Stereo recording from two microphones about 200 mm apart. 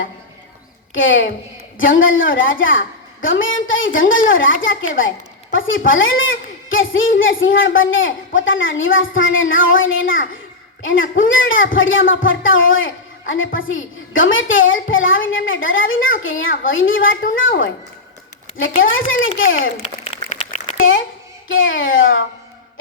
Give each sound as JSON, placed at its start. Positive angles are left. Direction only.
{"t": 0.9, "sound": "a woman's voice", "side_deg": 70}
{"t": 18.6, "sound": "a woman's voice", "side_deg": 75}
{"t": 20.1, "sound": "a sound", "side_deg": 30}
{"t": 21.4, "sound": "a woman's voice", "side_deg": 75}